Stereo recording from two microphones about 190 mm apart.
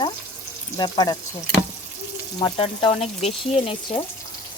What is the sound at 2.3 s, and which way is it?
Speech, 30° left (ahead or behind).